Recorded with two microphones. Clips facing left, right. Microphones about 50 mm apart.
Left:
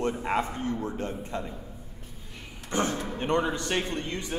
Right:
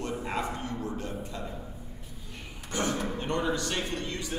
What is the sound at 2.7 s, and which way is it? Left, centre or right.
A man's voice, left.